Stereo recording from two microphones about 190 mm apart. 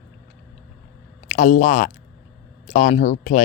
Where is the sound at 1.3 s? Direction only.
45° left (ahead or behind).